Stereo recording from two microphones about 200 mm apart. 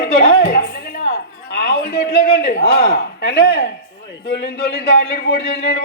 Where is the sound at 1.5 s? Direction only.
50° left (ahead or behind).